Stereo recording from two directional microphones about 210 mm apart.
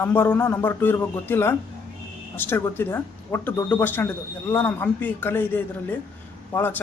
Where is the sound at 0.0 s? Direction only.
10° left (ahead or behind).